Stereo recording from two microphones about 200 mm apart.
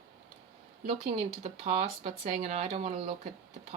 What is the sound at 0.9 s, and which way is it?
Speech, 30° right (ahead or behind).